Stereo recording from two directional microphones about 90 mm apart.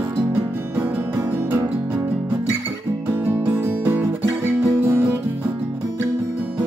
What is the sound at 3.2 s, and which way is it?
Music, 20° right (ahead or behind).